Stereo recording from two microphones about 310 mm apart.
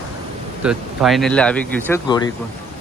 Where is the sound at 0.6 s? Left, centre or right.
Centre.